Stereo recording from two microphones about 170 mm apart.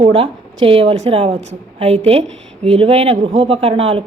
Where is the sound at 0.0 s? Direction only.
35° right (ahead or behind).